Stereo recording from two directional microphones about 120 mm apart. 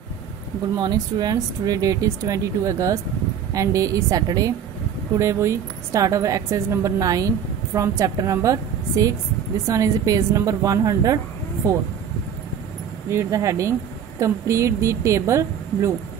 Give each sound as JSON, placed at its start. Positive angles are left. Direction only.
{"t": 0.7, "sound": "a woman's voice", "side_deg": -35}
{"t": 13.1, "sound": "a woman's voice", "side_deg": -25}